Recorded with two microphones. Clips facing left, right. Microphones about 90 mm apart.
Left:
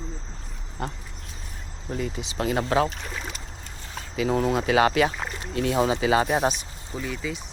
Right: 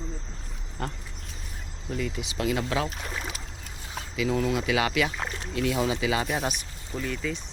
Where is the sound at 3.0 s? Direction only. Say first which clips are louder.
Even; centre (ahead or behind).